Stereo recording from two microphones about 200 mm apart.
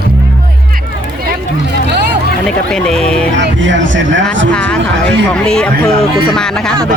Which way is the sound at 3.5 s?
70° right (ahead or behind).